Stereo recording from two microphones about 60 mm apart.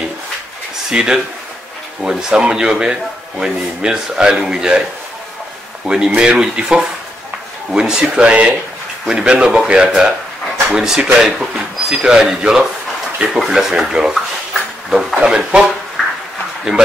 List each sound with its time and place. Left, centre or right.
0.8 s speech: centre
5.9 s speech: centre
14.5 s a sound: centre
15.1 s speech: centre